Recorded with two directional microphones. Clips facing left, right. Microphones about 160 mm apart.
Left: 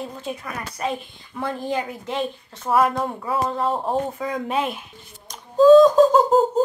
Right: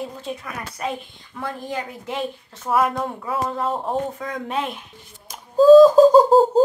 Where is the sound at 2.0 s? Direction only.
5° right (ahead or behind).